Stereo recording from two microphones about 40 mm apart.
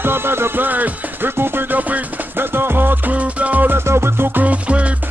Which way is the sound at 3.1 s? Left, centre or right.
Right.